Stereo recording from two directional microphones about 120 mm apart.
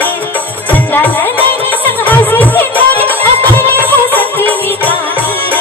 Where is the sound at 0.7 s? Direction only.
15° left (ahead or behind).